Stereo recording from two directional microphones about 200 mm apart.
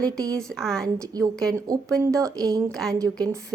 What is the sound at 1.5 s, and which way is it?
Speech, 15° right (ahead or behind).